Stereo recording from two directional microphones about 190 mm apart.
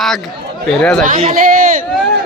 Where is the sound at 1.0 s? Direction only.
45° right (ahead or behind).